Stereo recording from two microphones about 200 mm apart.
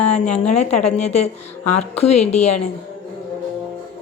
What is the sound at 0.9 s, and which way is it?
A woman's voice, 35° left (ahead or behind).